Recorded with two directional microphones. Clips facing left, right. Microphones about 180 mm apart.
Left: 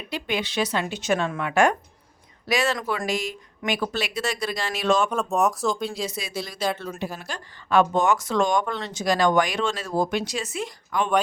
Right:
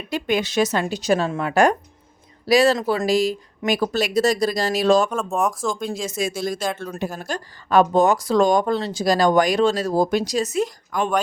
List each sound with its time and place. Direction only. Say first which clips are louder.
0.1 s speech: right 6 dB; 45° right (ahead or behind)
5.0 s speech: even; centre (ahead or behind)
5.9 s speech: right 5 dB; 45° right (ahead or behind)